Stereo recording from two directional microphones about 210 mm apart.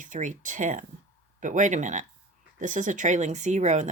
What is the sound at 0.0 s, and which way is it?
Speech, 35° right (ahead or behind).